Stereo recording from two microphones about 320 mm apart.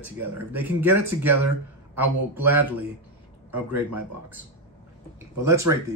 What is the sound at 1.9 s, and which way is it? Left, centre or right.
Speech, centre.